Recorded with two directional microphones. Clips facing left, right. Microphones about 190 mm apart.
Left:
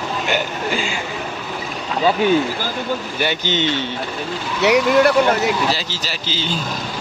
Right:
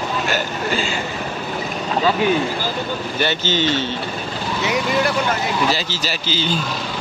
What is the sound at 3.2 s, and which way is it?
Speech, 15° left (ahead or behind).